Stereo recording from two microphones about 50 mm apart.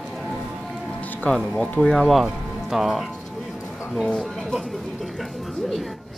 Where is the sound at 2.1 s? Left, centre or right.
Centre.